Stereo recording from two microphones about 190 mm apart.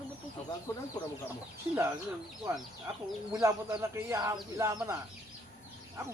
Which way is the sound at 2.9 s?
15° right (ahead or behind).